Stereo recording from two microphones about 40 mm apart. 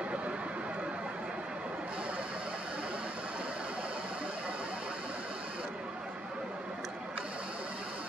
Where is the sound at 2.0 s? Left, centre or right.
Right.